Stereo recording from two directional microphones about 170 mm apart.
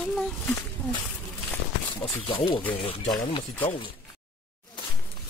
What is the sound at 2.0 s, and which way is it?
Speech, 30° left (ahead or behind).